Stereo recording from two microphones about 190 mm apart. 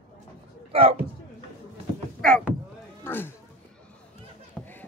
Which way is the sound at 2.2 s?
Centre (ahead or behind).